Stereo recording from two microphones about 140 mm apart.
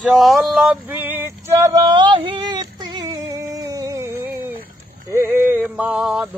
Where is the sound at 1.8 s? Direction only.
35° right (ahead or behind).